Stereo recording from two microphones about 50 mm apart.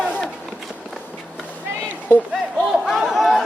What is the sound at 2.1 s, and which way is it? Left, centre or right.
Speech, left.